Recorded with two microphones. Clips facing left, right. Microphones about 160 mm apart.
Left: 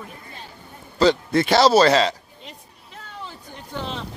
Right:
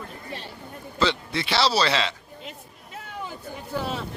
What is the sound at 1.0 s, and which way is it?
A man's voice, 45° left (ahead or behind).